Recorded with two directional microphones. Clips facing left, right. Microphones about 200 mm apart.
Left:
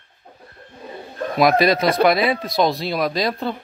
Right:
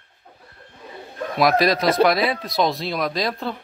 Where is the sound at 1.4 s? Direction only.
Centre (ahead or behind).